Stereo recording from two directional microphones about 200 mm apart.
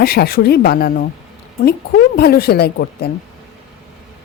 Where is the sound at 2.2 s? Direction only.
50° left (ahead or behind).